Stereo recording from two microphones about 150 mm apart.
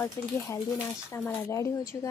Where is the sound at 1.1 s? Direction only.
15° left (ahead or behind).